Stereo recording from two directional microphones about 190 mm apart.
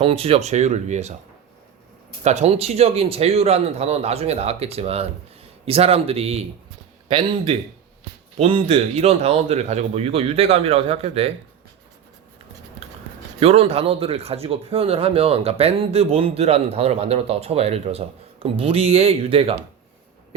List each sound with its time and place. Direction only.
0.0 s speech: 30° right (ahead or behind)
2.2 s speech: 35° right (ahead or behind)
12.8 s a sound: 30° right (ahead or behind)
13.4 s speech: 30° right (ahead or behind)